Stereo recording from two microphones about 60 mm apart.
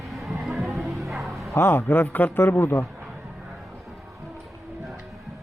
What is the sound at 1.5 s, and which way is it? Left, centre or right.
A man's voice, left.